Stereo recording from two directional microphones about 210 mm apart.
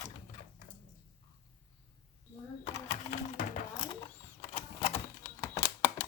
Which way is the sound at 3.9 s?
25° left (ahead or behind).